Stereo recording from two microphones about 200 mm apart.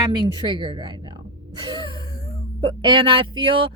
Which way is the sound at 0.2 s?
25° right (ahead or behind).